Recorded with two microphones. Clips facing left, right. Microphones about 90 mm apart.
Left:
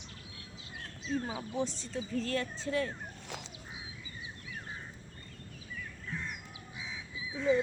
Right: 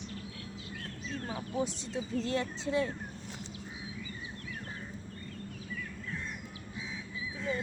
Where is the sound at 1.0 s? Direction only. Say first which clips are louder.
Left 4 dB; 15° left (ahead or behind).